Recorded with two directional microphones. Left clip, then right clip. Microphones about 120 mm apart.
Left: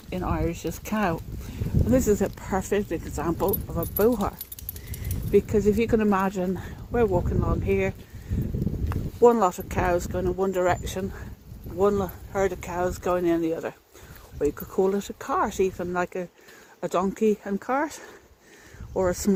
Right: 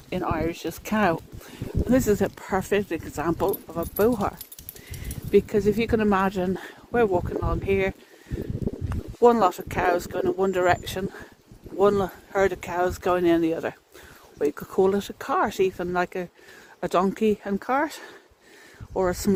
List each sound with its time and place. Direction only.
0.1 s speech: 55° right (ahead or behind)
2.0 s speech: 30° right (ahead or behind)
5.5 s speech: 20° right (ahead or behind)
6.0 s speech: 35° right (ahead or behind)
6.4 s speech: 50° right (ahead or behind)
9.2 s speech: 30° right (ahead or behind)
10.1 s speech: 40° right (ahead or behind)
11.8 s speech: 50° right (ahead or behind)
13.5 s speech: 80° right
14.4 s speech: 40° right (ahead or behind); by 19.3 s 20° right (ahead or behind)